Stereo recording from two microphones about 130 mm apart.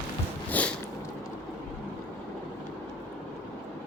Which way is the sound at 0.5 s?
10° left (ahead or behind).